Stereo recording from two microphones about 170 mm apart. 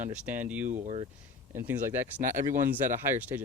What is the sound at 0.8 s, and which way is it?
Speech, 35° right (ahead or behind).